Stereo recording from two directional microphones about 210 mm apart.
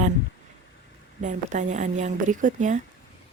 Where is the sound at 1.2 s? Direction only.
35° right (ahead or behind).